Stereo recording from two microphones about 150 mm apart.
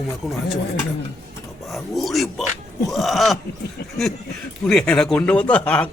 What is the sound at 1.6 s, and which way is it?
Speech, centre (ahead or behind).